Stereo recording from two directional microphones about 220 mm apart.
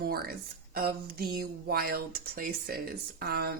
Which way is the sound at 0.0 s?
45° right (ahead or behind).